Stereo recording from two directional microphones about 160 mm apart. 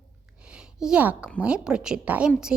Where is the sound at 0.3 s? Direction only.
5° right (ahead or behind).